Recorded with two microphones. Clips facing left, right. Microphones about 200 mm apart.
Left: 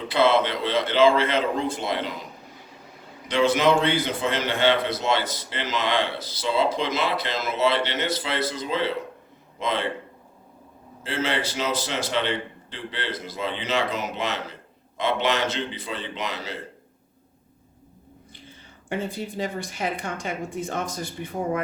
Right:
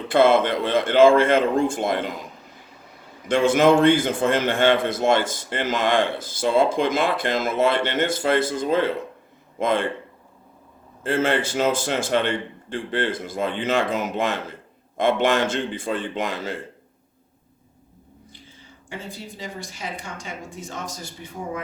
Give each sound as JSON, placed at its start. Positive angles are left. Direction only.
{"t": 0.1, "sound": "a man's voice", "side_deg": -50}
{"t": 3.2, "sound": "a man's voice", "side_deg": -50}
{"t": 11.0, "sound": "a man's voice", "side_deg": -50}
{"t": 18.9, "sound": "speech", "side_deg": 60}